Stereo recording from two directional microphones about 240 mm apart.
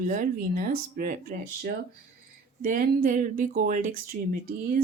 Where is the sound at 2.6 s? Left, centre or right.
Right.